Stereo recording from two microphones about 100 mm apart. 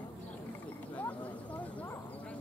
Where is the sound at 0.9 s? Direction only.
15° left (ahead or behind).